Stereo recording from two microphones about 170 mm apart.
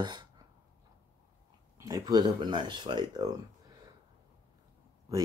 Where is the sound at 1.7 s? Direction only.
20° right (ahead or behind).